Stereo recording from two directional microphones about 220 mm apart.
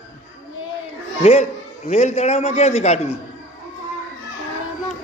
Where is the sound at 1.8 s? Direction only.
30° left (ahead or behind).